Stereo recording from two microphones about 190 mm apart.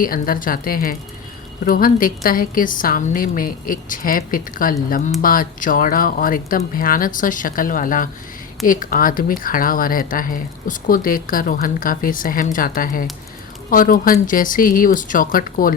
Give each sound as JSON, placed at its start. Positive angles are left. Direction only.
{"t": 0.0, "sound": "speech", "side_deg": 50}